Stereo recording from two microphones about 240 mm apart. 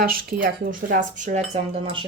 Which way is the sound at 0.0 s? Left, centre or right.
Right.